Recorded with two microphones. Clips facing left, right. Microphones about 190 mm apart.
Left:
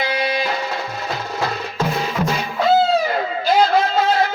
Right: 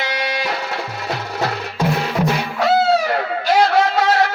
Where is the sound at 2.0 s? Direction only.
70° right (ahead or behind).